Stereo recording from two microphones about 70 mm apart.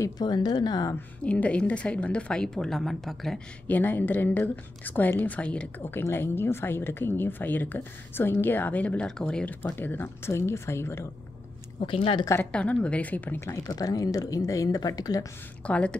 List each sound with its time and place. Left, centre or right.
0.2 s a woman's voice: left
1.2 s a woman's voice: centre
3.6 s a woman's voice: left
5.8 s a woman's voice: left; by 9.5 s centre
9.5 s speech: left
12.5 s a woman's voice: centre
13.7 s speech: left
15.6 s a woman's voice: centre